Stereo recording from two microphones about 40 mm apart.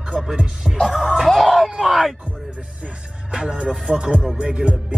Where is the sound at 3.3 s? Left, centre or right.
Right.